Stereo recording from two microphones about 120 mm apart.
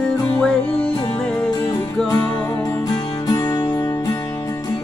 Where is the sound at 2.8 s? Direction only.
35° left (ahead or behind).